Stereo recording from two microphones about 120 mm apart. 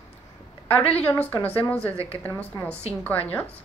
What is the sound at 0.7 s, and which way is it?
A woman's voice, 15° left (ahead or behind).